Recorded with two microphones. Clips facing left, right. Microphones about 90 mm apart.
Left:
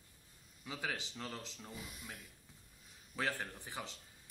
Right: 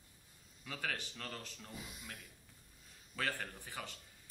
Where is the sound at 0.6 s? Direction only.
15° left (ahead or behind).